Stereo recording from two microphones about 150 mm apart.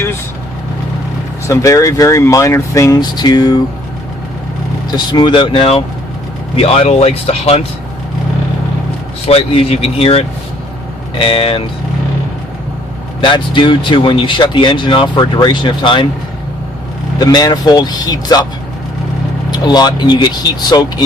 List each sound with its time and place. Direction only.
1.5 s speech: 20° left (ahead or behind)
4.9 s speech: 30° left (ahead or behind)
9.2 s speech: 40° left (ahead or behind)
13.2 s speech: 35° left (ahead or behind)
17.2 s speech: 25° left (ahead or behind)
19.5 s speech: 30° left (ahead or behind)